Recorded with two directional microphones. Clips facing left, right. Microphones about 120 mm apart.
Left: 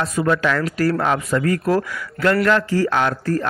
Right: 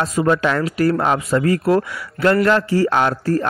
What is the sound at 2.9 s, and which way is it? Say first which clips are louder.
Speech: right 2 dB; 30° right (ahead or behind).